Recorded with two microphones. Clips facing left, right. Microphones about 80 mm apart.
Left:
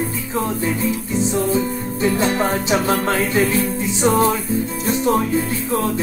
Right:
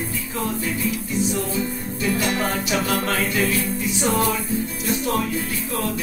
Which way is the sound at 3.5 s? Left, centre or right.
Left.